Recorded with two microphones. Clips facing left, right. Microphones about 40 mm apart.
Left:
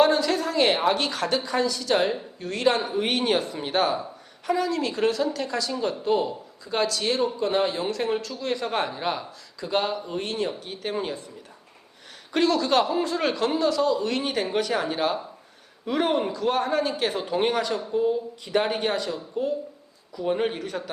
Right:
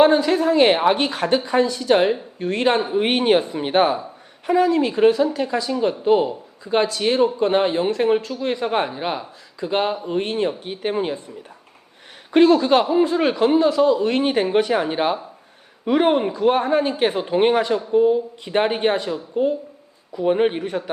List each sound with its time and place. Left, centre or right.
0.0 s speech: right
12.3 s speech: right